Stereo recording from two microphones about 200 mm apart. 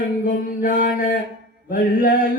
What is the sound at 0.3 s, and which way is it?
Mantra, 45° left (ahead or behind).